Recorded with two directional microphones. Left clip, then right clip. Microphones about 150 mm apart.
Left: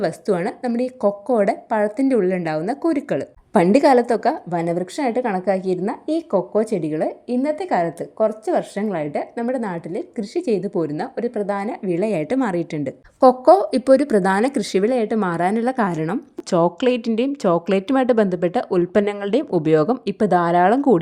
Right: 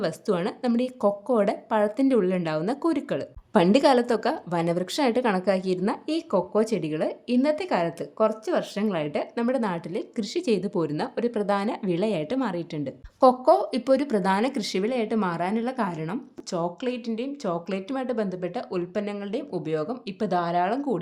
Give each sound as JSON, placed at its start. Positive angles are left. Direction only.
{"t": 0.0, "sound": "a woman's voice", "side_deg": 20}
{"t": 16.5, "sound": "speech", "side_deg": 60}
{"t": 19.2, "sound": "speech", "side_deg": 70}